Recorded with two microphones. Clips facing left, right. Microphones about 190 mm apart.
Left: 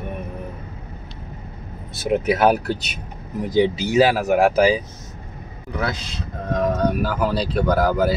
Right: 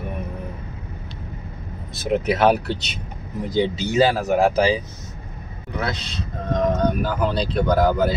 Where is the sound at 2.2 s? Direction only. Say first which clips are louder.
Even; 5° left (ahead or behind).